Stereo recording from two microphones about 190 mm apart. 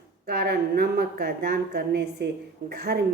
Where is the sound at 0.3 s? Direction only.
55° right (ahead or behind).